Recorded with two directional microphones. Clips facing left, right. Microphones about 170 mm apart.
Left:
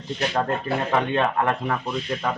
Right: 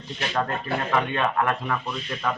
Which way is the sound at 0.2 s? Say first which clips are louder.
Left 2 dB; 25° left (ahead or behind).